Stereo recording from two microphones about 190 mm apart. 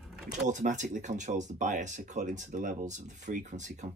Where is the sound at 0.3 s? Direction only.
40° right (ahead or behind).